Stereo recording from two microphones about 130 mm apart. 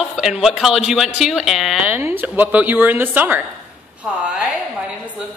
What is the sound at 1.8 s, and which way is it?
A man's voice, 15° right (ahead or behind).